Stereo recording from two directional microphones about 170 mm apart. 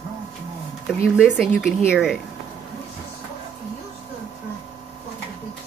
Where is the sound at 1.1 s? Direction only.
5° right (ahead or behind).